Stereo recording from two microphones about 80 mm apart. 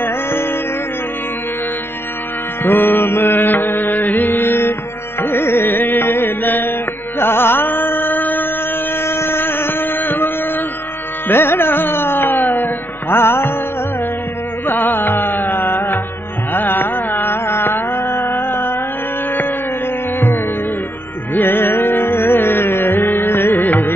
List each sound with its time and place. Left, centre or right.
0.0 s music: left
2.6 s mantra: left
5.2 s music: left
9.0 s a sound: left
11.2 s music: left
14.7 s carnatic music: left
21.3 s music: left